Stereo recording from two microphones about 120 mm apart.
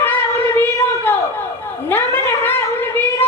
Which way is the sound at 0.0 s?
15° left (ahead or behind).